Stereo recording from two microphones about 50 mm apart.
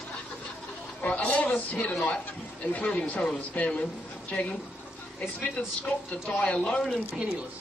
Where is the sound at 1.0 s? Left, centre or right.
Left.